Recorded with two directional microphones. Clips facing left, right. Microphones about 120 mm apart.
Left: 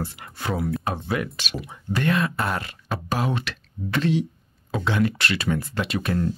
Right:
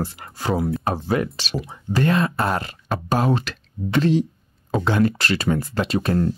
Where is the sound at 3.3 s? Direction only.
35° right (ahead or behind).